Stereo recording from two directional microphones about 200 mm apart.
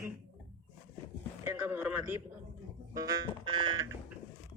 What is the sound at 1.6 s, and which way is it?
Speech, 10° right (ahead or behind).